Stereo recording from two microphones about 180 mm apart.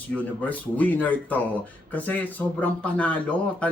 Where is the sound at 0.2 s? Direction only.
10° left (ahead or behind).